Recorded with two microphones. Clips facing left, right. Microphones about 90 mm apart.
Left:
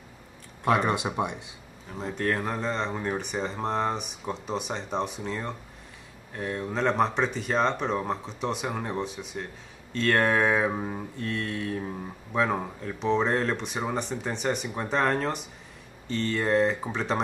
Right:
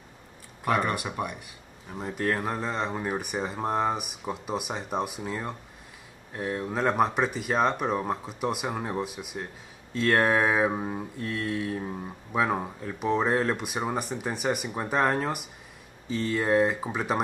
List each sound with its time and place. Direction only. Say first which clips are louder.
0.7 s speech: left 2 dB; 20° left (ahead or behind)
1.9 s speech: even; 5° right (ahead or behind)